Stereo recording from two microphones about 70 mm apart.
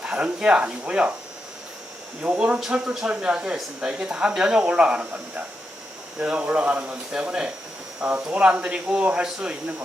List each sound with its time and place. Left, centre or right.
0.0 s speech: centre
2.2 s speech: right
2.6 s speech: centre
6.1 s speech: centre